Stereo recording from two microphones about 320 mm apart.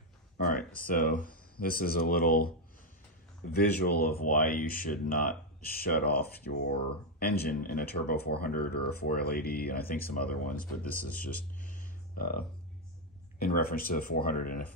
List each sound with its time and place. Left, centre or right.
0.5 s speech: left
3.5 s speech: left
11.6 s a sound: left
13.4 s speech: left